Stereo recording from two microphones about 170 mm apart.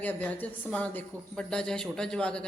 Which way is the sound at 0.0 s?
10° left (ahead or behind).